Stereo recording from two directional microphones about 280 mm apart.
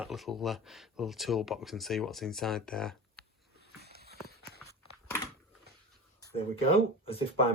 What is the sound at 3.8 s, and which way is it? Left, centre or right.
Clip-clop, right.